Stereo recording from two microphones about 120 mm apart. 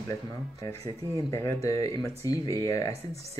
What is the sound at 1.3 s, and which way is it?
Speech, 25° left (ahead or behind).